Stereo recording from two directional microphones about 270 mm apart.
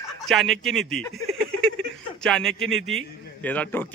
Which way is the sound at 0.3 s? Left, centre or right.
Centre.